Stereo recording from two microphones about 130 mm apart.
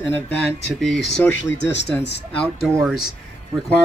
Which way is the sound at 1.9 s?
15° left (ahead or behind).